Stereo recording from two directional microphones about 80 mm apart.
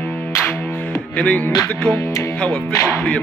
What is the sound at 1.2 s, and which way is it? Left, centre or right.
Speech, centre.